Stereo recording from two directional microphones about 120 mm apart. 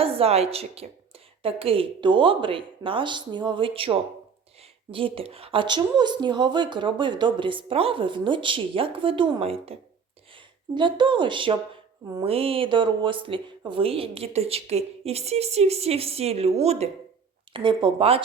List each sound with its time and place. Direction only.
0.0 s a woman's voice: 55° right (ahead or behind)
10.8 s a woman's voice: 40° right (ahead or behind)
12.2 s a woman's voice: 55° right (ahead or behind)
17.5 s a woman's voice: 45° right (ahead or behind)